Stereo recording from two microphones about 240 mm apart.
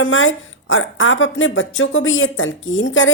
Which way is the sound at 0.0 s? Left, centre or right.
Left.